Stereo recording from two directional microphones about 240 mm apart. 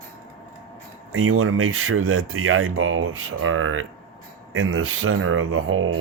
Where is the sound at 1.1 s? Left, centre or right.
Right.